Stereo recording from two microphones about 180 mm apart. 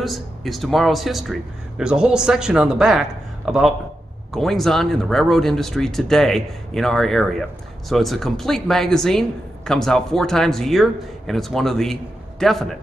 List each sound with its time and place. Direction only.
0.0 s speech: centre (ahead or behind)